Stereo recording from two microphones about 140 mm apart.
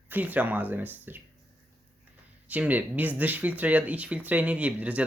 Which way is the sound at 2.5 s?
10° right (ahead or behind).